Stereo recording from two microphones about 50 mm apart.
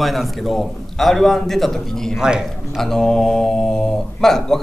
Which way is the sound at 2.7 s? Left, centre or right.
Centre.